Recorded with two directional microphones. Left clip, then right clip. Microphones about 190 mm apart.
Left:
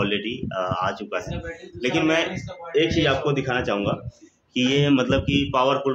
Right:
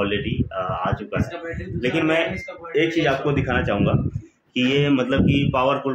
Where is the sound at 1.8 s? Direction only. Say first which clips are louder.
Right 1 dB; centre (ahead or behind).